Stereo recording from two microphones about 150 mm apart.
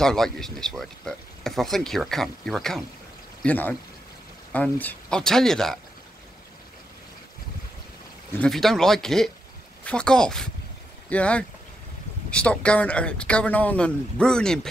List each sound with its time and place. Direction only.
0.0 s speech: 5° left (ahead or behind)
8.4 s speech: centre (ahead or behind)